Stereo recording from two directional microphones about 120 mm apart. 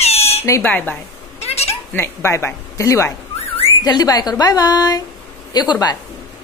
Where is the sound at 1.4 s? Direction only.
60° left (ahead or behind).